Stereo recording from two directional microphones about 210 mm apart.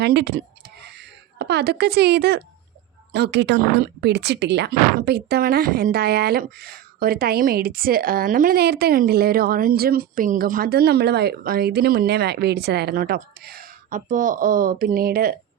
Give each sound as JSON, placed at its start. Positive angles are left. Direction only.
{"t": 0.0, "sound": "speech", "side_deg": -50}
{"t": 0.8, "sound": "a sound", "side_deg": -55}
{"t": 3.1, "sound": "speech", "side_deg": -55}